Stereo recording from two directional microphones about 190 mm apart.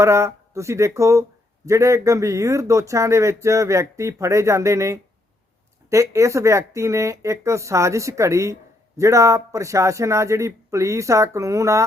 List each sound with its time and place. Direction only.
0.0 s speech: 15° right (ahead or behind)